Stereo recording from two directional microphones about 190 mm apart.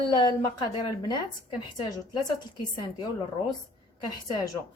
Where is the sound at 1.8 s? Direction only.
20° left (ahead or behind).